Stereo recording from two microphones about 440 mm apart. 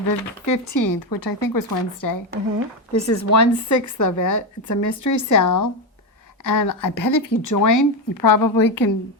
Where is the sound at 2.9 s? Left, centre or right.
Left.